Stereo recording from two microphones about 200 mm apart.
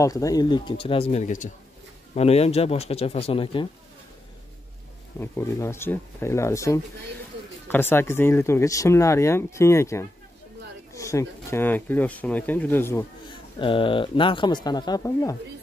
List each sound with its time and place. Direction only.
0.0 s speech: 15° left (ahead or behind)
5.2 s speech: 10° left (ahead or behind)
13.6 s speech: 25° left (ahead or behind)